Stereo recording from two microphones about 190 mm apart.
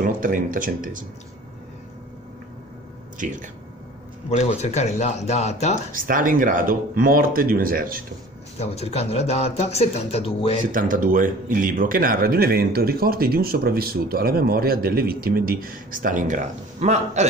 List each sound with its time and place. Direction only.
0.0 s a man's voice: 45° right (ahead or behind)
3.2 s speech: 40° right (ahead or behind)
4.4 s speech: 35° left (ahead or behind)
5.9 s a man's voice: 45° right (ahead or behind)
8.5 s speech: 35° left (ahead or behind)
10.7 s a man's voice: 45° right (ahead or behind)